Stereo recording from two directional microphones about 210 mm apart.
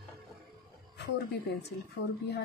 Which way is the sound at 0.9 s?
50° left (ahead or behind).